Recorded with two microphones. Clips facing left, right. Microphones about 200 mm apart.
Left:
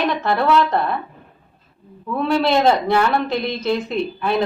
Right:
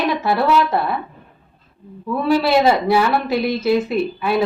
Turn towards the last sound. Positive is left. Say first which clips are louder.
# right 2 dB
turn(degrees=-5)  # may be behind; listen again after turning